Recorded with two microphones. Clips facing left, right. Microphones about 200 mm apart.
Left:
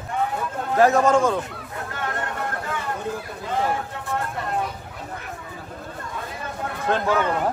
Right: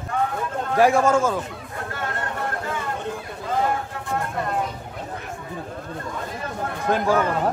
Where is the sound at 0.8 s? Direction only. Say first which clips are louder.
Left 1 dB; 10° right (ahead or behind).